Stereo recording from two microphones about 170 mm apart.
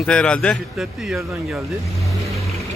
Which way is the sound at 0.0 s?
5° left (ahead or behind).